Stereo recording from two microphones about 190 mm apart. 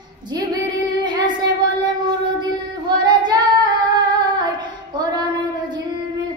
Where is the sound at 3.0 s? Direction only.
25° right (ahead or behind).